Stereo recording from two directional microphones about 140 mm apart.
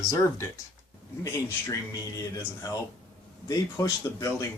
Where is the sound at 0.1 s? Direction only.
20° left (ahead or behind).